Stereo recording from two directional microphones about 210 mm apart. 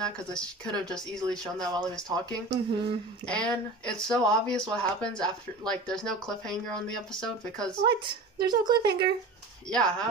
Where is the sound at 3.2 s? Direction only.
5° left (ahead or behind).